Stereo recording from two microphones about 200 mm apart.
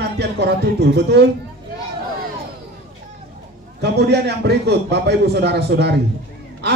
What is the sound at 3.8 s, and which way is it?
A man's voice, 55° right (ahead or behind).